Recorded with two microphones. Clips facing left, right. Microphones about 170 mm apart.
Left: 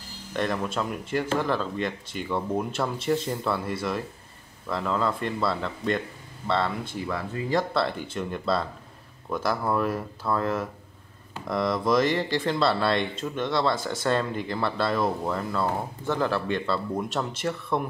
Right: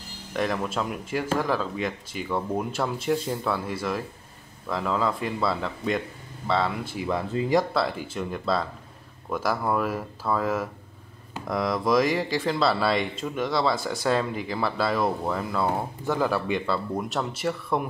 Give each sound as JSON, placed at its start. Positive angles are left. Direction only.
{"t": 0.3, "sound": "speech", "side_deg": -5}
{"t": 7.1, "sound": "speech", "side_deg": -20}
{"t": 7.7, "sound": "speech", "side_deg": -5}